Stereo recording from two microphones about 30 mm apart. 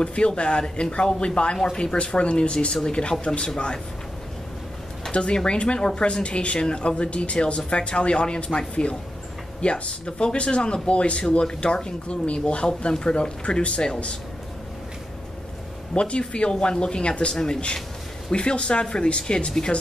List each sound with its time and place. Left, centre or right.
0.0 s speech: left
2.7 s speech: left
5.1 s speech: left
6.2 s speech: left
15.9 s speech: left
17.3 s speech: left
18.3 s speech: left